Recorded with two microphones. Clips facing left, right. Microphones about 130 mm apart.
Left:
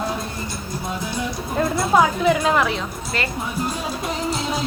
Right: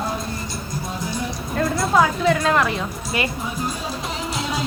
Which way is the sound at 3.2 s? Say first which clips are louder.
Right 2 dB; 15° right (ahead or behind).